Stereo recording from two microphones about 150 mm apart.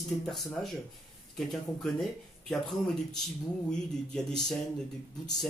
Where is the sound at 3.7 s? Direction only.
5° left (ahead or behind).